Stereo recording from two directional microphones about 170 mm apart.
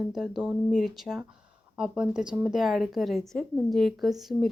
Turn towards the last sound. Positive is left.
turn(degrees=0)  # may be behind; listen again after turning